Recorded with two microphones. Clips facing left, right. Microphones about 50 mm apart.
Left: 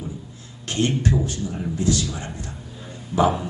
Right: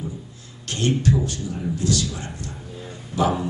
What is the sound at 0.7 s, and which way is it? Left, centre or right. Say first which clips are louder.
A man's voice: even; left.